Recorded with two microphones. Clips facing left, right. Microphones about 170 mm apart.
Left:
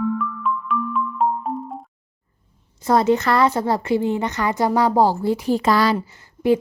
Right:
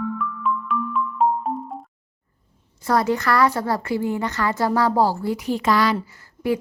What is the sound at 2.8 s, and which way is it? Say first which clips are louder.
A woman's voice: left 3 dB; 20° left (ahead or behind).